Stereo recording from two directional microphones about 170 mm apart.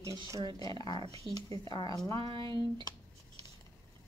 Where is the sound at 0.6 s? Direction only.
25° left (ahead or behind).